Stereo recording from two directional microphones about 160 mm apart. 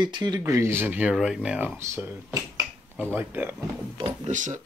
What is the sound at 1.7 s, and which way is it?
Speech, 15° right (ahead or behind).